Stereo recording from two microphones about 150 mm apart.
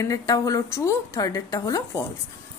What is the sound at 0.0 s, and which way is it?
A woman's voice, 20° left (ahead or behind).